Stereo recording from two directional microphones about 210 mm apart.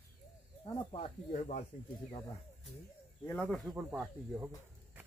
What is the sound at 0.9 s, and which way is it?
Speech, 30° left (ahead or behind).